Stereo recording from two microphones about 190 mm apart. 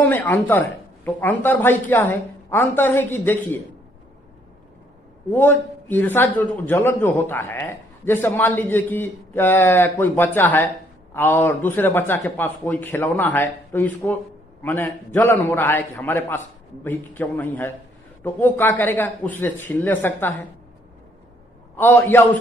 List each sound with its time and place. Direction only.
0.0 s a man's voice: 10° left (ahead or behind)
5.3 s a man's voice: 10° left (ahead or behind)
21.7 s a man's voice: 10° left (ahead or behind)